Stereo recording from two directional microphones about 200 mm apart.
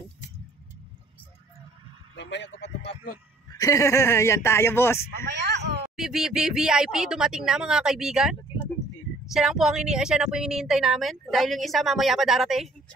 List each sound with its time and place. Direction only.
2.1 s speech: 60° left (ahead or behind)
3.5 s speech: 15° left (ahead or behind)
5.1 s speech: 55° right (ahead or behind)
5.9 s a woman's voice: centre (ahead or behind)